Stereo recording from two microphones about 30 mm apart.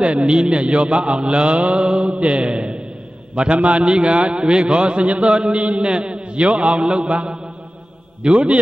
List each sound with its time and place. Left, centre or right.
0.0 s a man's voice: right
1.9 s a man's voice: right